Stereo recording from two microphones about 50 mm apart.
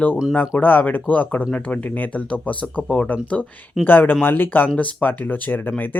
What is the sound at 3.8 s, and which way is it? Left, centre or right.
Speech, left.